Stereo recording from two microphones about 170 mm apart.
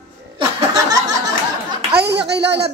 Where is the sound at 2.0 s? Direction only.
80° right.